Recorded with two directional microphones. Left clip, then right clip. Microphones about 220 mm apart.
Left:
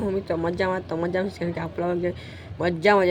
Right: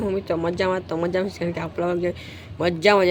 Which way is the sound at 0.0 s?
10° right (ahead or behind).